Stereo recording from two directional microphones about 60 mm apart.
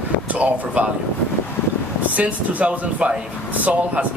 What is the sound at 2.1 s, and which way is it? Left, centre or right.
Speech, right.